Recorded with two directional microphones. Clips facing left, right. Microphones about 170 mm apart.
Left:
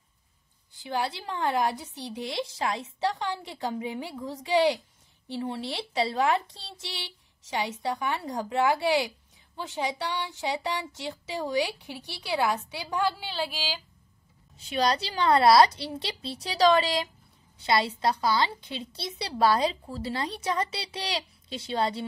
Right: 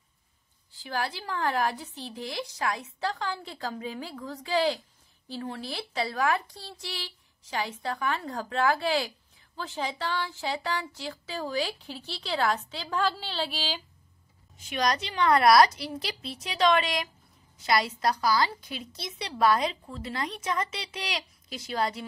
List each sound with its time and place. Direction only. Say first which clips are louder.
0.7 s a woman's voice: left 2 dB; 20° left (ahead or behind)
14.6 s a woman's voice: left 2 dB; 30° left (ahead or behind)